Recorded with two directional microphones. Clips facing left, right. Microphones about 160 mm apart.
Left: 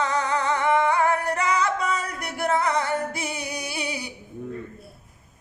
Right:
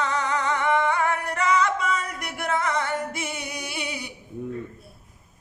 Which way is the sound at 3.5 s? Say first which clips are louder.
Left 2 dB; 35° left (ahead or behind).